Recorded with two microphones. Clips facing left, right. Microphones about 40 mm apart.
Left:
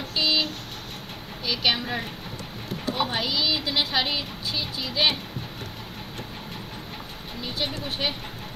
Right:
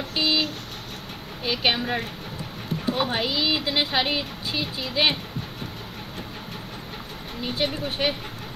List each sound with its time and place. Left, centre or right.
0.1 s vehicle: right
1.4 s speech: right
3.0 s speech: centre
7.4 s speech: right